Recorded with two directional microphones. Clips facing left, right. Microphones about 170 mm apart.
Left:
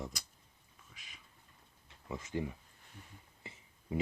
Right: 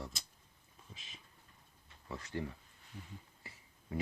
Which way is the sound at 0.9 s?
25° right (ahead or behind).